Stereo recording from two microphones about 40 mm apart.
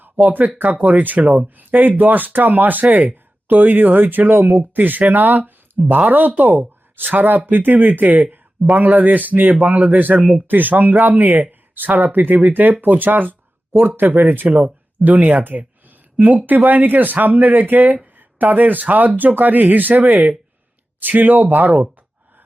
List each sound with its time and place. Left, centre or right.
0.0 s speech: right